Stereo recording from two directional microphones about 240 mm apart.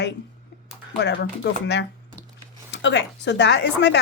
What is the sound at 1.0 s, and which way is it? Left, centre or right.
Speech, left.